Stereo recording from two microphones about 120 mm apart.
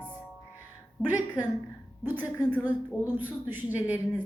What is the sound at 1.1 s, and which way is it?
A woman's voice, 15° right (ahead or behind).